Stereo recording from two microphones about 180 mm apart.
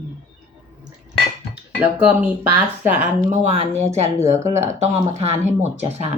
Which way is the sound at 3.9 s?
15° right (ahead or behind).